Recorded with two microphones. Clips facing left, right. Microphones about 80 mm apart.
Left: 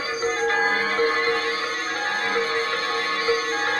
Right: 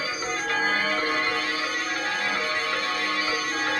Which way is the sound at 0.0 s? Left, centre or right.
Left.